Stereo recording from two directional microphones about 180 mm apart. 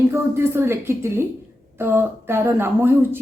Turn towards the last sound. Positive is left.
turn(degrees=-10)  # may be behind; listen again after turning